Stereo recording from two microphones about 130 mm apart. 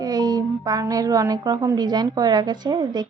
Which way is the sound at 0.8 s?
30° right (ahead or behind).